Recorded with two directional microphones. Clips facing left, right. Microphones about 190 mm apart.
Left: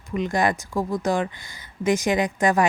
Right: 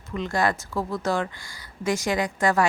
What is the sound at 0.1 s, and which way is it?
A woman's voice, 15° left (ahead or behind).